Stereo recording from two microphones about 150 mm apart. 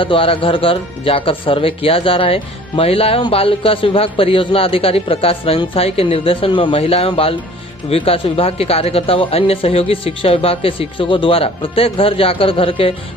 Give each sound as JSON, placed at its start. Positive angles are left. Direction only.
{"t": 0.0, "sound": "speech", "side_deg": 35}